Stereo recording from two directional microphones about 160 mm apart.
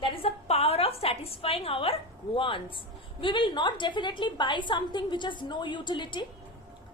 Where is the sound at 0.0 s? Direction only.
40° left (ahead or behind).